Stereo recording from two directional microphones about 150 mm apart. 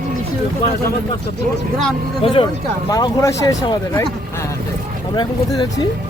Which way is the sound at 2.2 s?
35° left (ahead or behind).